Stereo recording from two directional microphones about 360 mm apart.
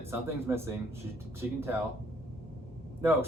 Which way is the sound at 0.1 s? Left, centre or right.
Centre.